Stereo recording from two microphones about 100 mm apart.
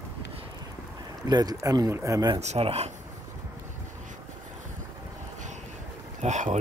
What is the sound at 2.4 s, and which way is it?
Speech, 85° right.